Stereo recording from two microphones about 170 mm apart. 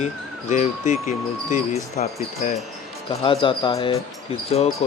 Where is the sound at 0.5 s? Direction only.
45° left (ahead or behind).